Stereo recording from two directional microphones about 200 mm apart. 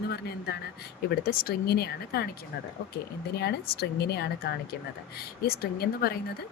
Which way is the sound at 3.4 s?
55° left (ahead or behind).